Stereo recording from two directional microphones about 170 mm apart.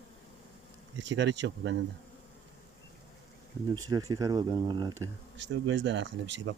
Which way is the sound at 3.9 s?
20° right (ahead or behind).